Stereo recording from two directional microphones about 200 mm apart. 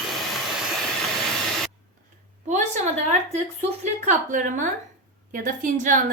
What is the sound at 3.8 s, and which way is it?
A woman's voice, 40° right (ahead or behind).